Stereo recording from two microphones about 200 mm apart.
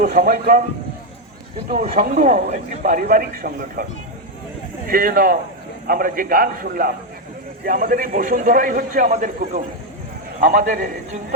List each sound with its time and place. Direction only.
0.0 s a man's voice: 45° right (ahead or behind)
1.7 s a man's voice: 45° right (ahead or behind)
4.9 s a man's voice: 45° right (ahead or behind)